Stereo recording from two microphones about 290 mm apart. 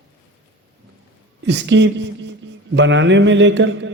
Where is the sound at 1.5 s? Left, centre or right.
Right.